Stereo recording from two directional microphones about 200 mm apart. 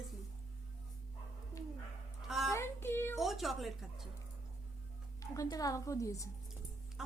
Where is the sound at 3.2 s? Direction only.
Centre (ahead or behind).